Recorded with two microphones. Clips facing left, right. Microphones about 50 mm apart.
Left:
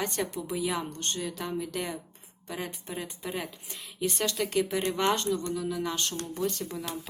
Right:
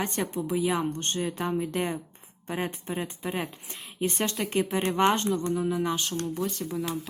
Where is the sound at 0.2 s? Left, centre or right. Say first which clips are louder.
Right 3 dB; centre.